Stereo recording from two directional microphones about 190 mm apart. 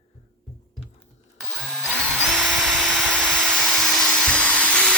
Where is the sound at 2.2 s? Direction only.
Centre (ahead or behind).